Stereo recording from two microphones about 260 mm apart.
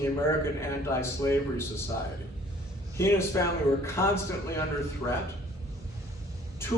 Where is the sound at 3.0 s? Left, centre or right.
Centre.